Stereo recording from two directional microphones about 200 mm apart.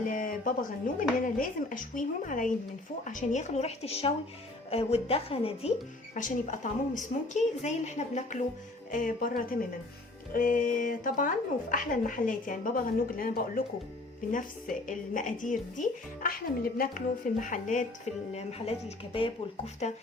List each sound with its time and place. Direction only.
0.0 s a woman's voice: 40° left (ahead or behind)
6.1 s a woman's voice: 40° left (ahead or behind)